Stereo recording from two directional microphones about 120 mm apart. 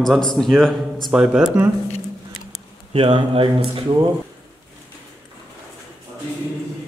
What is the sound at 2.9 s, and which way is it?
Speech, 50° right (ahead or behind).